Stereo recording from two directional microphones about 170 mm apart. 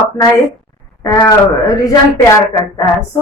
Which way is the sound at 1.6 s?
20° left (ahead or behind).